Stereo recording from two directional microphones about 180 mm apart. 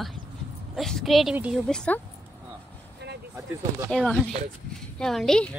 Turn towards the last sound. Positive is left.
turn(degrees=0)  # may be behind; listen again after turning